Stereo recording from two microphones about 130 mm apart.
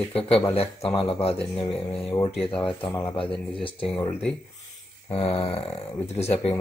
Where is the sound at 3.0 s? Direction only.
40° left (ahead or behind).